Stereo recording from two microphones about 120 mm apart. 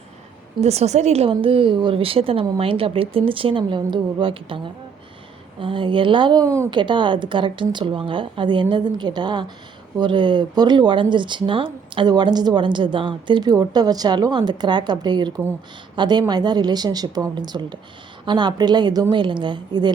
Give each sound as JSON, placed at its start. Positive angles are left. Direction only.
{"t": 0.6, "sound": "a woman's voice", "side_deg": -65}
{"t": 6.7, "sound": "a woman's voice", "side_deg": -40}